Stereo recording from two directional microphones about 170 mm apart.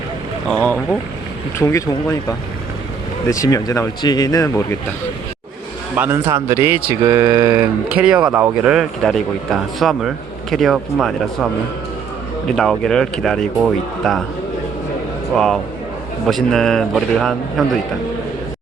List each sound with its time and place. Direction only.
0.5 s speech: 10° left (ahead or behind)
3.2 s speech: 20° left (ahead or behind)
6.0 s speech: 15° right (ahead or behind); by 11.1 s centre (ahead or behind)
12.5 s speech: 5° left (ahead or behind)
16.2 s speech: centre (ahead or behind)